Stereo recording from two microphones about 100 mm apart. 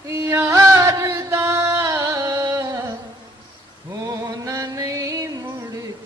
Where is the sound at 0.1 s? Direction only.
25° right (ahead or behind).